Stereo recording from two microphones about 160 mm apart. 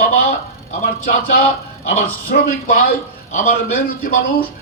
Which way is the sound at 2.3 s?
60° left (ahead or behind).